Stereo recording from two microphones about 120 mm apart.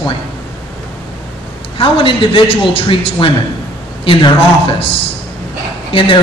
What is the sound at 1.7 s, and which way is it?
A woman's voice, 45° left (ahead or behind).